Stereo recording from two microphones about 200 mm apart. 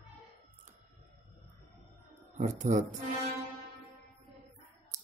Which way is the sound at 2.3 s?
40° right (ahead or behind).